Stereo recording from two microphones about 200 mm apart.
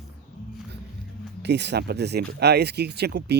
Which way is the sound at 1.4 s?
60° right (ahead or behind).